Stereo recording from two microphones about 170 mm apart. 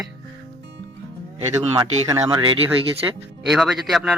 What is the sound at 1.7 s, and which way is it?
Speech, 25° right (ahead or behind).